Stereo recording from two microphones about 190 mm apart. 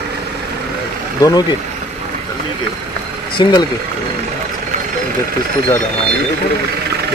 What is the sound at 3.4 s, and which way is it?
Speech, 25° left (ahead or behind).